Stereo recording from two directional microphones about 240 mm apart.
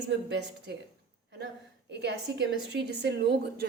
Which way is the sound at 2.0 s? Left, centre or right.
Right.